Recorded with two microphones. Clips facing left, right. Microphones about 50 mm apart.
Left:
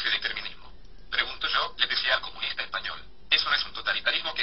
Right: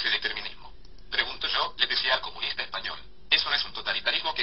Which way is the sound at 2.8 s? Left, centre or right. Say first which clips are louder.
Left 1 dB; centre.